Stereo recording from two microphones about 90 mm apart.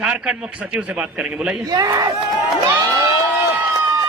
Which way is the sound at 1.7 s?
45° right (ahead or behind).